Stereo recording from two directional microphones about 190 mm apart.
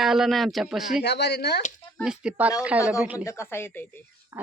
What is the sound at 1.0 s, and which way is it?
Speech, 60° left (ahead or behind).